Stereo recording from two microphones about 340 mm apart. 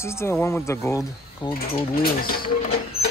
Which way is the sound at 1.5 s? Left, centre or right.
Left.